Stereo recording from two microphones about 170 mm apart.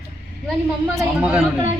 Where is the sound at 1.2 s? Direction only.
5° right (ahead or behind).